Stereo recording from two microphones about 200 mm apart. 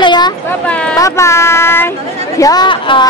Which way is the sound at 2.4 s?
20° left (ahead or behind).